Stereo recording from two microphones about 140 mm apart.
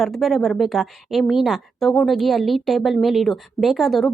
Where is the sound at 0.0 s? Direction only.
Centre (ahead or behind).